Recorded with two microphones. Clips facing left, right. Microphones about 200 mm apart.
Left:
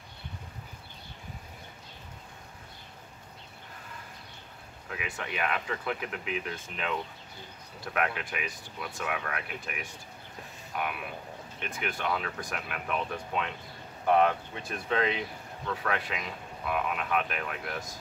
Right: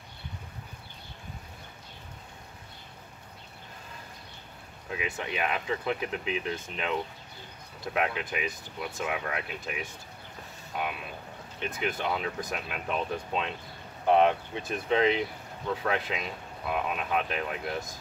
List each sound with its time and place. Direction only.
4.9 s speech: 20° right (ahead or behind)